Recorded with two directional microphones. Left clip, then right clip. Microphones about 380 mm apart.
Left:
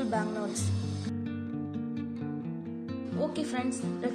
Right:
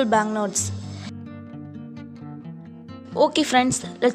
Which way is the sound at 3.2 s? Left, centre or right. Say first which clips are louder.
Right 15 dB; right.